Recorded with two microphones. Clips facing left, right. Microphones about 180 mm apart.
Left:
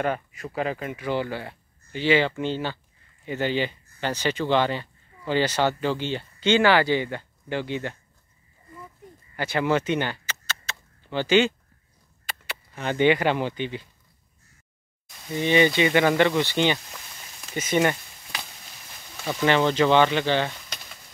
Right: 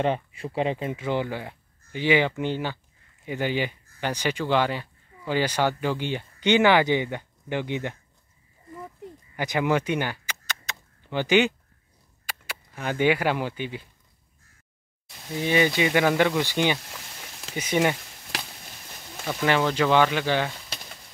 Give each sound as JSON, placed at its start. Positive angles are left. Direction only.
{"t": 0.0, "sound": "speech", "side_deg": -30}
{"t": 9.4, "sound": "a sound", "side_deg": -15}
{"t": 12.3, "sound": "speech", "side_deg": -10}
{"t": 15.3, "sound": "speech", "side_deg": -5}
{"t": 19.2, "sound": "speech", "side_deg": -5}